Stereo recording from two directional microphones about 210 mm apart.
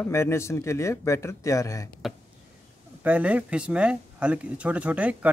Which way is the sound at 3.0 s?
5° right (ahead or behind).